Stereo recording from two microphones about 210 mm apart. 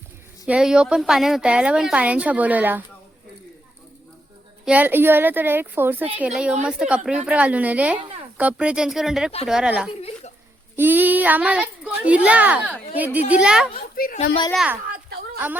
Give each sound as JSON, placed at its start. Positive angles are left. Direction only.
{"t": 0.4, "sound": "a woman's voice", "side_deg": -5}
{"t": 4.6, "sound": "a child's voice", "side_deg": -5}
{"t": 13.7, "sound": "a woman's voice", "side_deg": 45}
{"t": 14.5, "sound": "a woman's voice", "side_deg": -5}